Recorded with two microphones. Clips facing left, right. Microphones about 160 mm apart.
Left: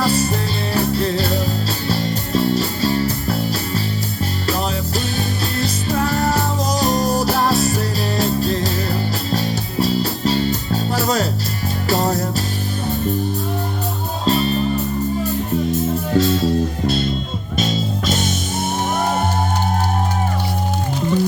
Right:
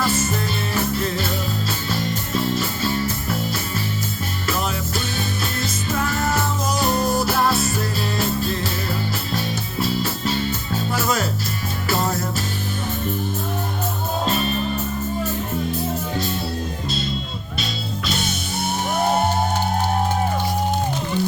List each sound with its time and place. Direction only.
0.0 s music: 35° left (ahead or behind)
4.9 s music: 35° left (ahead or behind)
14.3 s music: 35° left (ahead or behind)
16.1 s music: 90° left